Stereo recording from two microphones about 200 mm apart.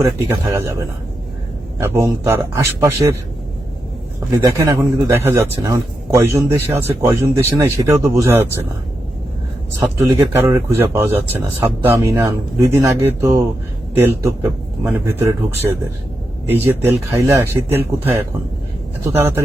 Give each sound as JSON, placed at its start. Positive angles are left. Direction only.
{"t": 0.0, "sound": "a man's voice", "side_deg": -15}
{"t": 4.4, "sound": "a man's voice", "side_deg": -15}
{"t": 10.0, "sound": "a man's voice", "side_deg": -15}